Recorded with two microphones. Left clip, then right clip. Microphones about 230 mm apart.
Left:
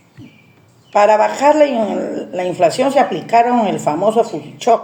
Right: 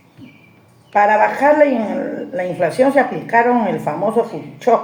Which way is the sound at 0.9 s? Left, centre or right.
Left.